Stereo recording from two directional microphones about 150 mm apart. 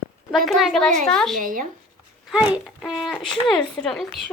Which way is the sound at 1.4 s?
65° right (ahead or behind).